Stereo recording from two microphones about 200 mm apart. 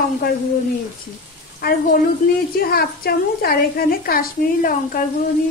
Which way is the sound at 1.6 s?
50° left (ahead or behind).